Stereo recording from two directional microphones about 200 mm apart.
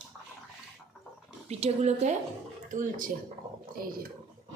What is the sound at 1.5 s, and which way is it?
A woman's voice, 30° right (ahead or behind).